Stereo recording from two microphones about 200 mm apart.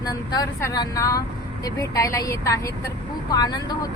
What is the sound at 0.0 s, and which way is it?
Speech, 20° left (ahead or behind).